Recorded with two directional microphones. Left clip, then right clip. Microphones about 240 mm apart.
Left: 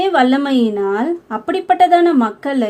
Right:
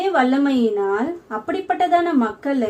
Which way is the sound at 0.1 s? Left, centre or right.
Left.